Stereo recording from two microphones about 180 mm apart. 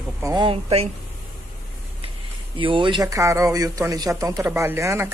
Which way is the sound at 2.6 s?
30° right (ahead or behind).